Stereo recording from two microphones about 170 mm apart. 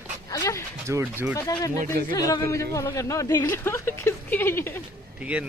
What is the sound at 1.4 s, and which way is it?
Speech, 20° left (ahead or behind).